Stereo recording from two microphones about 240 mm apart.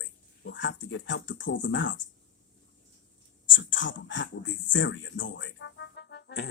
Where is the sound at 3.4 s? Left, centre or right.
Left.